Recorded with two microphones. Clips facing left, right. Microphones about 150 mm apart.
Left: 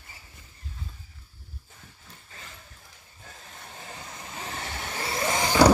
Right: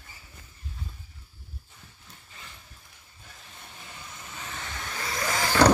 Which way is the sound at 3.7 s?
35° left (ahead or behind).